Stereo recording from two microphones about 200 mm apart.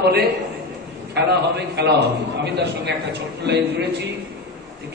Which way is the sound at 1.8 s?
55° right (ahead or behind).